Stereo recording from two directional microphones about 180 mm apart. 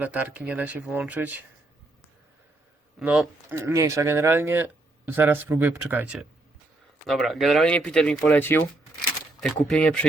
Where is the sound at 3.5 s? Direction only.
15° right (ahead or behind).